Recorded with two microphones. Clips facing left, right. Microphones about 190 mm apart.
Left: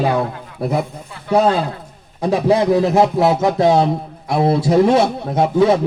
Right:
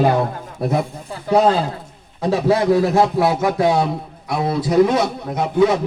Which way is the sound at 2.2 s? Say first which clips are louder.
Left 2 dB; 15° left (ahead or behind).